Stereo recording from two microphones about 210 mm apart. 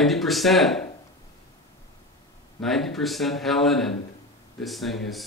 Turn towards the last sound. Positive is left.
turn(degrees=0)  # may be behind; listen again after turning